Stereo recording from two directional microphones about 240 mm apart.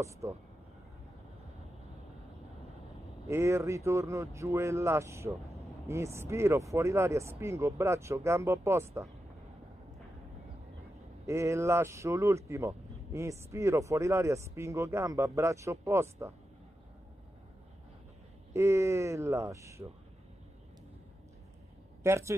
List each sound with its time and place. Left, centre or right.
0.0 s speech: centre
3.3 s speech: centre
11.2 s speech: centre
18.5 s speech: centre
22.0 s speech: centre